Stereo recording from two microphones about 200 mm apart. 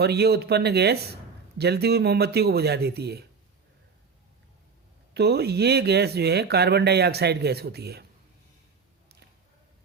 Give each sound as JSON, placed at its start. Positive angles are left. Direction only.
{"t": 0.0, "sound": "speech", "side_deg": -55}
{"t": 5.1, "sound": "speech", "side_deg": -55}